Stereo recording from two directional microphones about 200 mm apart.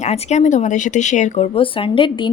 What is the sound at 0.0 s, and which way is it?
Speech, 35° left (ahead or behind).